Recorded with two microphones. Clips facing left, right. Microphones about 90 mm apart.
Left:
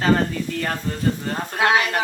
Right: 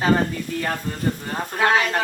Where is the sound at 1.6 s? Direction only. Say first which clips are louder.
Even; 10° left (ahead or behind).